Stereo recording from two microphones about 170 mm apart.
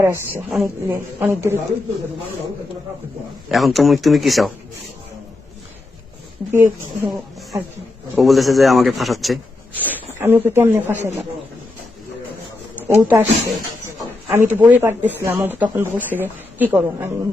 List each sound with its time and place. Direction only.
0.0 s speech: 15° right (ahead or behind)
3.5 s a man's voice: centre (ahead or behind)
6.5 s speech: 15° right (ahead or behind)
8.1 s a man's voice: centre (ahead or behind)
9.8 s speech: 15° right (ahead or behind)
12.9 s speech: 15° right (ahead or behind)
14.3 s speech: 10° right (ahead or behind)